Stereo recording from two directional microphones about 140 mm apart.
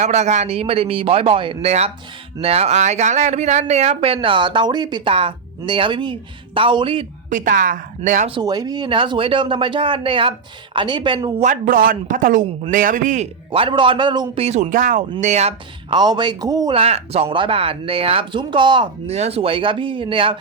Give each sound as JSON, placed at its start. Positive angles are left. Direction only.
{"t": 0.0, "sound": "a man's voice", "side_deg": -55}
{"t": 7.3, "sound": "a man's voice", "side_deg": -70}
{"t": 8.4, "sound": "speech", "side_deg": -30}
{"t": 11.3, "sound": "a man's voice", "side_deg": -70}
{"t": 13.5, "sound": "speech", "side_deg": -40}
{"t": 14.3, "sound": "speech", "side_deg": -50}
{"t": 15.2, "sound": "a man's voice", "side_deg": -55}
{"t": 15.9, "sound": "speech", "side_deg": -30}
{"t": 16.7, "sound": "speech", "side_deg": -45}
{"t": 19.0, "sound": "speech", "side_deg": -50}